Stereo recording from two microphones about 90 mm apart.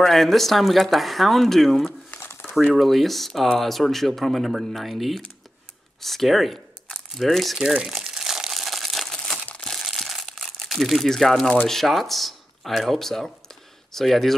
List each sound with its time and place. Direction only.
0.0 s speech: 5° left (ahead or behind)
2.0 s crumpling: 25° left (ahead or behind)
2.4 s speech: centre (ahead or behind)
5.9 s crumpling: centre (ahead or behind)
9.8 s crumpling: centre (ahead or behind)
11.6 s speech: 5° left (ahead or behind)